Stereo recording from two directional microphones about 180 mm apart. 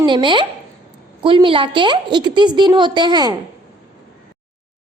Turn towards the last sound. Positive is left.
turn(degrees=-25)  # may be behind; listen again after turning